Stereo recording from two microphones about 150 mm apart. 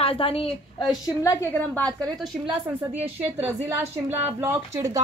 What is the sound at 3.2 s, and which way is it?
A woman's voice, 15° right (ahead or behind).